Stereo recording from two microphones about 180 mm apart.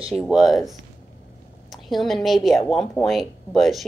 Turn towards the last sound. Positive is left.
turn(degrees=0)  # may be behind; listen again after turning